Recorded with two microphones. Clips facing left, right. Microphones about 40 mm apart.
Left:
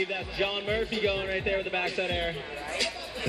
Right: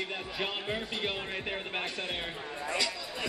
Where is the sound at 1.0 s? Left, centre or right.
Left.